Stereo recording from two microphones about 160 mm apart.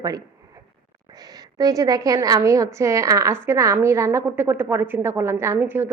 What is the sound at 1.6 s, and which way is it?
A woman's voice, 20° right (ahead or behind).